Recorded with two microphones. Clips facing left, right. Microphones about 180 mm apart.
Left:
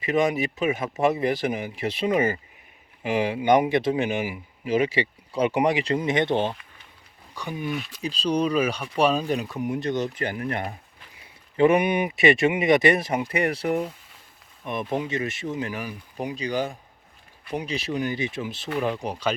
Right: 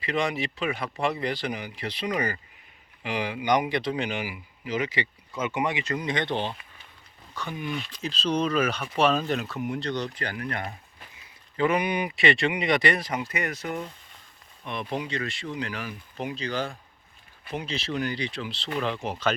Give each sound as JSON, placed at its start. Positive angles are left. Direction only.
{"t": 0.0, "sound": "speech", "side_deg": 20}
{"t": 14.6, "sound": "speech", "side_deg": 15}